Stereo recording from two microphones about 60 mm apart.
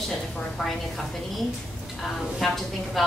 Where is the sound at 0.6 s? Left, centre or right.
Centre.